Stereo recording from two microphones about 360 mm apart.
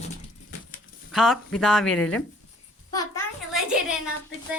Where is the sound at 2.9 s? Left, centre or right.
Centre.